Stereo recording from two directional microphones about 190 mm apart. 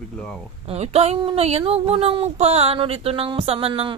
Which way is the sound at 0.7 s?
35° right (ahead or behind).